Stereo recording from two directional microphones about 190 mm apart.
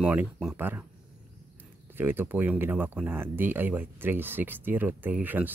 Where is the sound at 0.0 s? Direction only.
5° right (ahead or behind).